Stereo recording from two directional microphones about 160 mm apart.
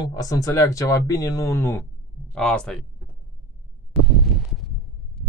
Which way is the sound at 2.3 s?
5° left (ahead or behind).